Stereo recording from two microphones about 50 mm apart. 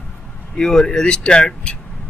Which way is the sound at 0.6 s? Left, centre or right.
Centre.